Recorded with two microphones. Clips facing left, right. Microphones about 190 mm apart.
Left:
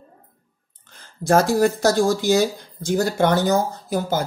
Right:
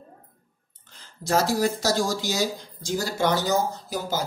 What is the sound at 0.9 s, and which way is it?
Speech, 55° left (ahead or behind).